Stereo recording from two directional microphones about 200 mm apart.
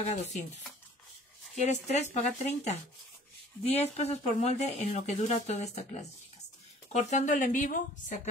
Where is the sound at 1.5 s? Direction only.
35° left (ahead or behind).